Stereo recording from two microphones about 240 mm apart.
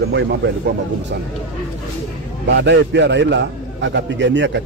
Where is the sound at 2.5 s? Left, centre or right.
Right.